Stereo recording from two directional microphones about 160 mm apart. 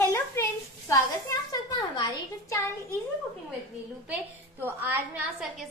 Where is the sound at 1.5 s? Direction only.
25° left (ahead or behind).